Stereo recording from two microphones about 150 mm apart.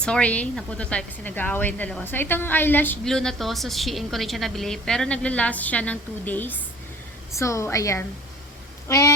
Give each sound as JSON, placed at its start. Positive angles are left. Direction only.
{"t": 0.0, "sound": "a woman's voice", "side_deg": 5}